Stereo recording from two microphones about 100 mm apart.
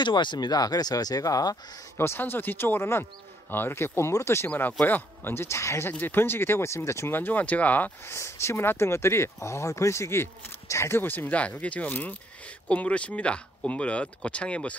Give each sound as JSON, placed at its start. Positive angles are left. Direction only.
{"t": 0.0, "sound": "speech", "side_deg": 50}
{"t": 2.0, "sound": "speech", "side_deg": 20}
{"t": 4.5, "sound": "speech", "side_deg": 15}
{"t": 8.2, "sound": "speech", "side_deg": 25}